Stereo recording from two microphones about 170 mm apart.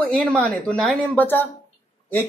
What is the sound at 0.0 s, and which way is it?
Speech, 10° left (ahead or behind).